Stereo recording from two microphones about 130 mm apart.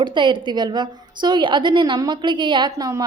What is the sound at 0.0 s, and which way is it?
A woman's voice, 35° right (ahead or behind).